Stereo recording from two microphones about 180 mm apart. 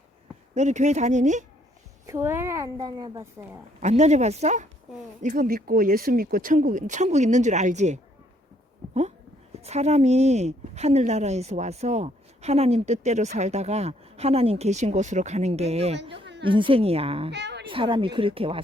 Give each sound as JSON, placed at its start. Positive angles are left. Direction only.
{"t": 0.5, "sound": "a woman's voice", "side_deg": -40}
{"t": 2.0, "sound": "a woman's voice", "side_deg": -15}
{"t": 3.8, "sound": "a woman's voice", "side_deg": -40}
{"t": 9.6, "sound": "a woman's voice", "side_deg": -35}
{"t": 17.3, "sound": "a sound", "side_deg": -70}
{"t": 17.7, "sound": "speech", "side_deg": -30}